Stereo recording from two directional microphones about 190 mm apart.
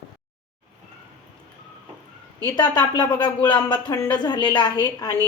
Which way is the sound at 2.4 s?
20° left (ahead or behind).